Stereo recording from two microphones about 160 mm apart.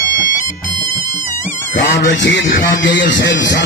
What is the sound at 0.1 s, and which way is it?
Music, 60° left (ahead or behind).